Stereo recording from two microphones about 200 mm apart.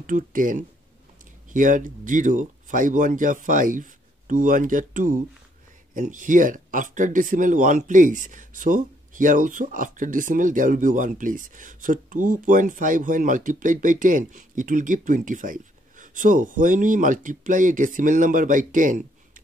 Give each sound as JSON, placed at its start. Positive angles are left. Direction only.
{"t": 0.0, "sound": "speech", "side_deg": -40}